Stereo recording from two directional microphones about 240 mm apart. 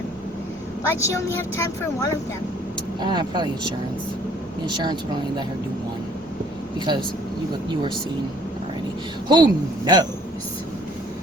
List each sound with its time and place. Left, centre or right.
0.9 s speech: centre
3.0 s speech: centre
6.7 s speech: centre
9.3 s speech: centre